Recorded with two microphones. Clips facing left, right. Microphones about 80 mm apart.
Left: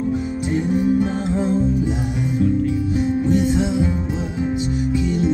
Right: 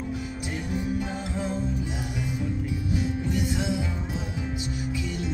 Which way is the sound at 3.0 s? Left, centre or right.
Left.